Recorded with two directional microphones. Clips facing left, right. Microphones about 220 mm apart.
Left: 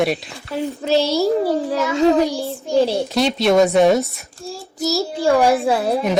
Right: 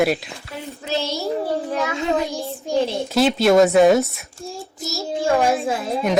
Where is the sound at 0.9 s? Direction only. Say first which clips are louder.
Left 7 dB; 35° left (ahead or behind).